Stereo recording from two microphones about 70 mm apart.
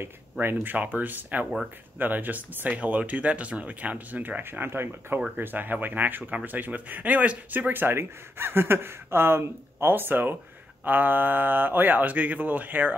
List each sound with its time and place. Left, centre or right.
0.0 s speech: right